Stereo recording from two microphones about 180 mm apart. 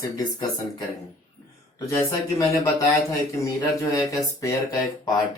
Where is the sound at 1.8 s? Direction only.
15° left (ahead or behind).